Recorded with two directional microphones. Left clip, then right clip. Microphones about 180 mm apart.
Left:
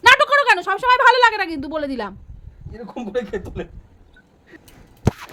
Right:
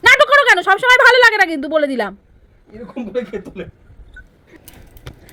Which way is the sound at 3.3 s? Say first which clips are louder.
Even; 25° left (ahead or behind).